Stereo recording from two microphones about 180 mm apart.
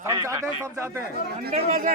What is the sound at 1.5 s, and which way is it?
Speech, 45° right (ahead or behind).